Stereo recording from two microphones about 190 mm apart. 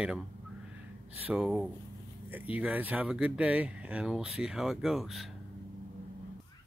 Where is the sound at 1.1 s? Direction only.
5° right (ahead or behind).